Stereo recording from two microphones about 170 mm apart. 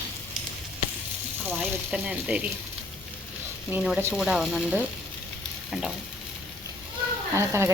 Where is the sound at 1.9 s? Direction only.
5° right (ahead or behind).